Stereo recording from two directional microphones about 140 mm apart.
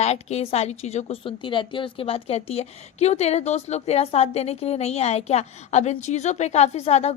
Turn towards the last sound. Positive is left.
turn(degrees=50)  # may be behind; listen again after turning